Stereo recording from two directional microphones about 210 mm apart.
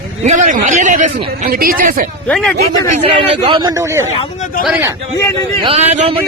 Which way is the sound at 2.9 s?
25° right (ahead or behind).